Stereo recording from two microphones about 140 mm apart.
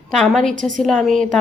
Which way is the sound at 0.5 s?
70° right (ahead or behind).